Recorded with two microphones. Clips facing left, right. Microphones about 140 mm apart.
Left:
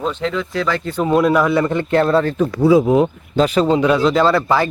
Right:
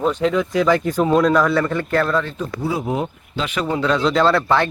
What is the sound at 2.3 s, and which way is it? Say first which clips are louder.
Speech: left 11 dB; 75° left (ahead or behind).